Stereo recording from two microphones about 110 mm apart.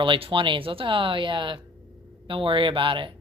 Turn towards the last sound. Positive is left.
turn(degrees=-50)  # may be behind; listen again after turning